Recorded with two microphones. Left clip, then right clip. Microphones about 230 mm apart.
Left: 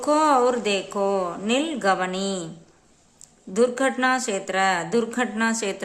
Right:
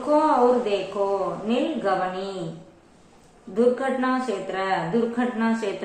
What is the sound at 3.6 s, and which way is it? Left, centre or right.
A woman's voice, left.